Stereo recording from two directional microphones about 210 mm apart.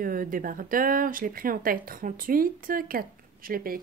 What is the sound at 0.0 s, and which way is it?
Speech, 40° right (ahead or behind).